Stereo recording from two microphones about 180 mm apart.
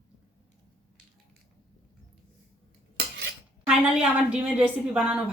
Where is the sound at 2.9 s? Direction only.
90° right.